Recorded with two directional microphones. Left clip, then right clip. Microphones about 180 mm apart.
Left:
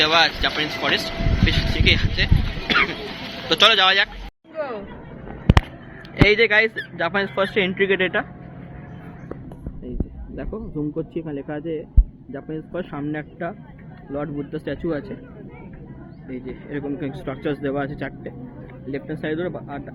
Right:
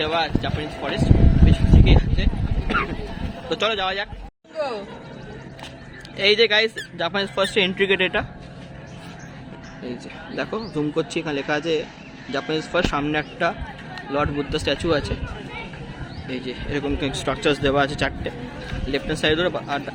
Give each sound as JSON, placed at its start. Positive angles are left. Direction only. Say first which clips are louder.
{"t": 0.0, "sound": "speech", "louder": "left 6 dB", "side_deg": 0}
{"t": 4.5, "sound": "speech", "louder": "right 2 dB", "side_deg": -50}
{"t": 6.2, "sound": "speech", "louder": "left 1 dB", "side_deg": -10}
{"t": 10.3, "sound": "speech", "louder": "right 4 dB", "side_deg": -15}
{"t": 16.3, "sound": "speech", "louder": "right 4 dB", "side_deg": -15}